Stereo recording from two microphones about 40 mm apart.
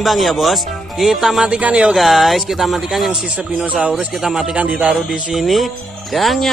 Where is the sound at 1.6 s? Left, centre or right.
Right.